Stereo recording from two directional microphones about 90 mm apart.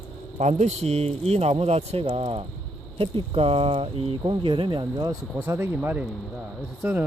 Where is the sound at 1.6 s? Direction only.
90° right; by 5.1 s 60° right (ahead or behind).